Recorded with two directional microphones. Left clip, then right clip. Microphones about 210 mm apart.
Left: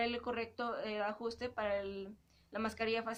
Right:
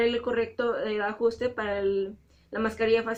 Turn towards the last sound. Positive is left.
turn(degrees=25)  # may be behind; listen again after turning